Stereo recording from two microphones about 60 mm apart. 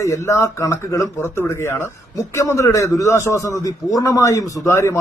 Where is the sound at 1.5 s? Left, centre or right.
Left.